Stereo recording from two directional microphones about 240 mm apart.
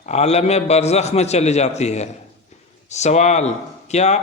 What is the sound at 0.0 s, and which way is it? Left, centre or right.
A man's voice, left.